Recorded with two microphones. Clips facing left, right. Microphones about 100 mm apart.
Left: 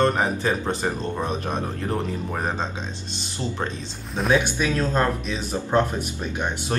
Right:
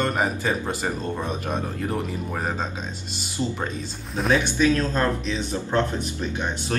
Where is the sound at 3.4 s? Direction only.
10° right (ahead or behind).